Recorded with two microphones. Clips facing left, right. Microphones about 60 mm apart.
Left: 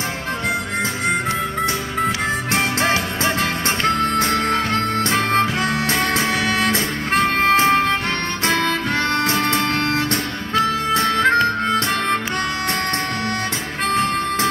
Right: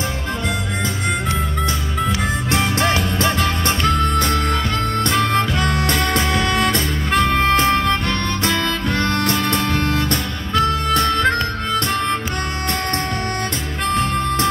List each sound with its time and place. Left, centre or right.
2.8 s music: centre
5.6 s music: centre
7.5 s music: left
8.5 s harmonica: left
9.0 s music: centre
11.1 s harmonica: left